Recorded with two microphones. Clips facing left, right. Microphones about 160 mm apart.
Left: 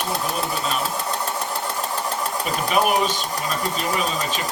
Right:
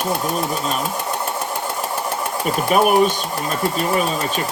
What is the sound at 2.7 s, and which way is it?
Speech, 50° right (ahead or behind).